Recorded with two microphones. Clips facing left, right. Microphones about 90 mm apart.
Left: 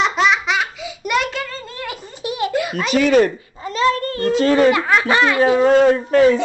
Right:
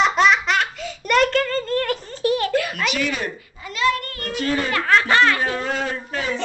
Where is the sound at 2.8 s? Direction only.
40° left (ahead or behind).